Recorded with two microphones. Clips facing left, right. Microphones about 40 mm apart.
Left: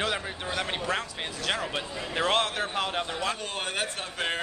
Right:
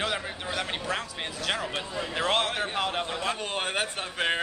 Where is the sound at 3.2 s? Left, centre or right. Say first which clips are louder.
Right 1 dB; centre.